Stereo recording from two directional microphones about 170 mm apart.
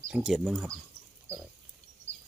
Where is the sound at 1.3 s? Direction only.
15° right (ahead or behind).